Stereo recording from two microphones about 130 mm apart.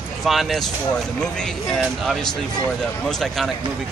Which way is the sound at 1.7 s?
5° left (ahead or behind).